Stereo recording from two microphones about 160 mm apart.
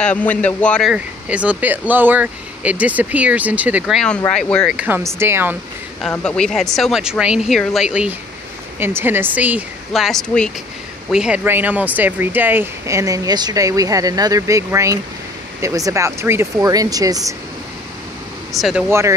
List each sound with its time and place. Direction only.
0.0 s speech: 10° left (ahead or behind)
0.9 s speech: 10° right (ahead or behind)
4.7 s speech: 10° right (ahead or behind)
6.0 s speech: 5° left (ahead or behind)
11.1 s speech: 5° right (ahead or behind); by 17.4 s 20° right (ahead or behind)
18.5 s speech: centre (ahead or behind)
18.9 s speech: 15° right (ahead or behind)